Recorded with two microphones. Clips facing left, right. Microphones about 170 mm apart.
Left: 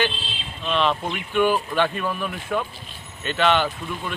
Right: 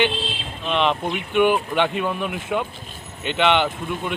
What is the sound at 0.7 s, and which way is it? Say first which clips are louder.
Speech: right 1 dB; 15° right (ahead or behind).